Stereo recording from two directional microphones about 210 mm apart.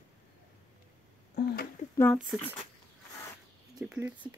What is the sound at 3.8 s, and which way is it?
Speech, 5° right (ahead or behind).